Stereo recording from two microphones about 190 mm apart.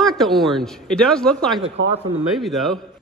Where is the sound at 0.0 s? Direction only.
Centre (ahead or behind).